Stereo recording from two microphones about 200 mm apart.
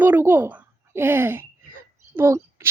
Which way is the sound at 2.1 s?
10° right (ahead or behind).